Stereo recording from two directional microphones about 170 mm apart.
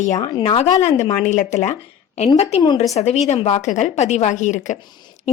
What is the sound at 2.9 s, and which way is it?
A woman's voice, 40° left (ahead or behind).